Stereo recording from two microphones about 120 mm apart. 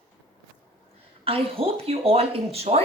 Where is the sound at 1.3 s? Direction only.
55° right (ahead or behind).